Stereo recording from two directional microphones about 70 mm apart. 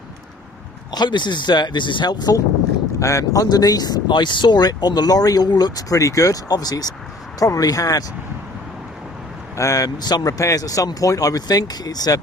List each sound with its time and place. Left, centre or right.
0.9 s speech: left
3.0 s speech: left
9.6 s speech: left
10.0 s speech: left